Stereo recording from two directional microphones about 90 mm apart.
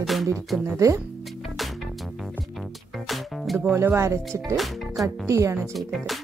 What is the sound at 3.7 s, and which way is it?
Speech, 30° right (ahead or behind).